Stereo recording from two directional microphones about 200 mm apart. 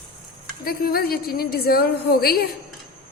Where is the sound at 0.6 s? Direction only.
50° left (ahead or behind).